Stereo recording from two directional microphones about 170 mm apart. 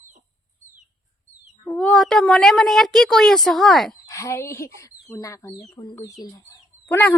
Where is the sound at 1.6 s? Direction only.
5° left (ahead or behind).